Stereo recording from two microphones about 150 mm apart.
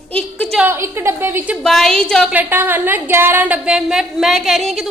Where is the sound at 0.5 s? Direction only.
15° right (ahead or behind).